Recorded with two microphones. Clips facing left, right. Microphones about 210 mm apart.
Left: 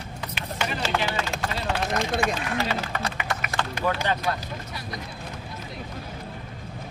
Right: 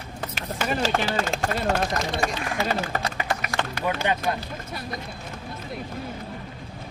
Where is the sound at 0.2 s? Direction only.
45° right (ahead or behind).